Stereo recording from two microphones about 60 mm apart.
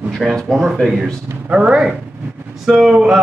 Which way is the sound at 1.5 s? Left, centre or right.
Centre.